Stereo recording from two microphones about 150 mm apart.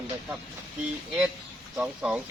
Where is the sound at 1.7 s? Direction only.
5° right (ahead or behind).